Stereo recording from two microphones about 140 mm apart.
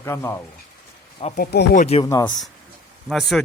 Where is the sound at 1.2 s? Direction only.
40° left (ahead or behind).